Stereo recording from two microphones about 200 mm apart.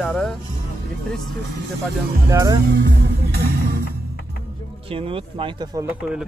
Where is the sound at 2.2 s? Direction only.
15° right (ahead or behind).